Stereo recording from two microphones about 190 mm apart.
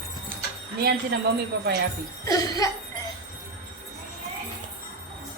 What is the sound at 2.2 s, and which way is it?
Speech, 20° left (ahead or behind).